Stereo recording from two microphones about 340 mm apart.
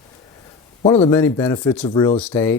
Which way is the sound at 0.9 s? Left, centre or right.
Centre.